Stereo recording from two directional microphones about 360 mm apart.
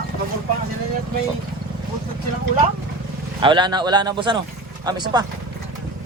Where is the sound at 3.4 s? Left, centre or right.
Centre.